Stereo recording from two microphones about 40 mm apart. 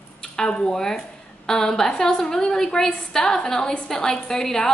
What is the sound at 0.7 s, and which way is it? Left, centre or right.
A woman's voice, centre.